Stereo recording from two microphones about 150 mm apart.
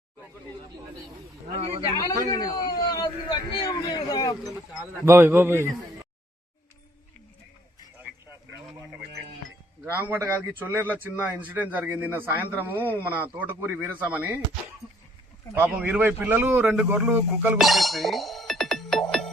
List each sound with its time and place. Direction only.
2.0 s a man's voice: 25° left (ahead or behind)
5.0 s speech: 15° right (ahead or behind)
9.8 s speech: 15° right (ahead or behind)
12.7 s speech: 15° left (ahead or behind)
13.1 s speech: 10° right (ahead or behind)
15.5 s speech: 10° right (ahead or behind)
17.6 s music: centre (ahead or behind)